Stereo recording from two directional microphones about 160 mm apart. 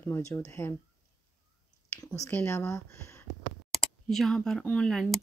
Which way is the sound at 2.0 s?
20° left (ahead or behind).